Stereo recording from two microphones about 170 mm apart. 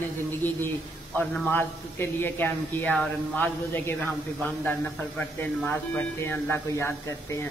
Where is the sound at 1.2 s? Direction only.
10° left (ahead or behind).